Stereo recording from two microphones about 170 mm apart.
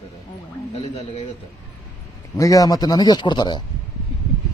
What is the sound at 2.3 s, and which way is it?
A man's voice, 20° left (ahead or behind).